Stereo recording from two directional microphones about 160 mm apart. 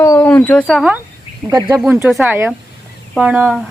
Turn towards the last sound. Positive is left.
turn(degrees=-10)  # may be behind; listen again after turning